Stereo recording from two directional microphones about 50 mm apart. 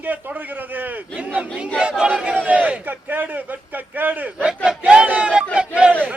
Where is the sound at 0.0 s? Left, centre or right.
Right.